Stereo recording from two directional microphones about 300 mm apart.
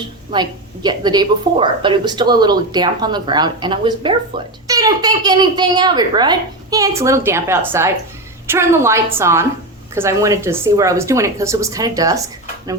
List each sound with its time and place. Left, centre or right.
0.3 s speech: centre